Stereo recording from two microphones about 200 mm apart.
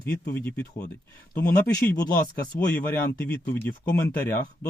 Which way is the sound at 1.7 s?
20° left (ahead or behind).